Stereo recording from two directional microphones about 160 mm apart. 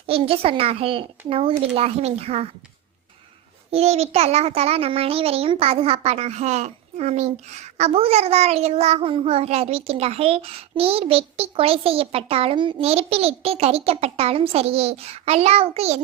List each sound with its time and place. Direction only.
0.1 s a child's voice: 35° right (ahead or behind)
3.7 s a child's voice: 40° right (ahead or behind)